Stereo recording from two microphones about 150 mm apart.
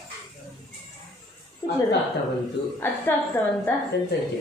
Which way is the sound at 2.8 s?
15° left (ahead or behind).